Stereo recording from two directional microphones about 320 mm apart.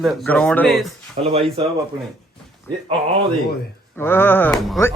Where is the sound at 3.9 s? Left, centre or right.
Centre.